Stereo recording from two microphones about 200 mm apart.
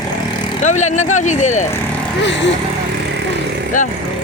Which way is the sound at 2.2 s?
65° left (ahead or behind).